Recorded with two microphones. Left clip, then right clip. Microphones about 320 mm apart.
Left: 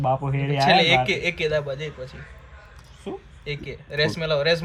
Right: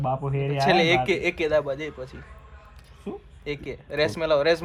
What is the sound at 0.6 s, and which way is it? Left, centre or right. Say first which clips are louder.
A man's voice: left 3 dB; right.